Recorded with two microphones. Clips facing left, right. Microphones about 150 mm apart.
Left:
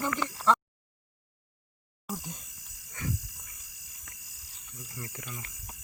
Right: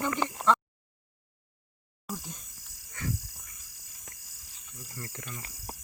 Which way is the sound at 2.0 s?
15° left (ahead or behind).